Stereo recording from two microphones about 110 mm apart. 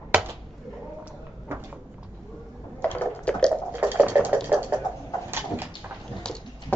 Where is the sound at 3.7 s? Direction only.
15° right (ahead or behind).